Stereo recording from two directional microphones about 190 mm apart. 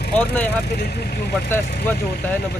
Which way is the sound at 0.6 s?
60° left (ahead or behind).